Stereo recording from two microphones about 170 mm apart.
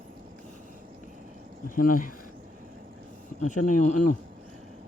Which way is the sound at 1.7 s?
55° left (ahead or behind).